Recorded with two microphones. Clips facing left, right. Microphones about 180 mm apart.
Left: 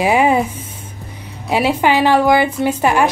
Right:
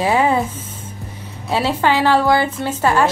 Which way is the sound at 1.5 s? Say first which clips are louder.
Left 2 dB; 15° left (ahead or behind).